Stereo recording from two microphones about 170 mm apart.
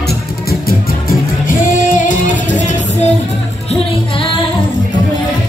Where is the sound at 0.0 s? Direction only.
65° left (ahead or behind).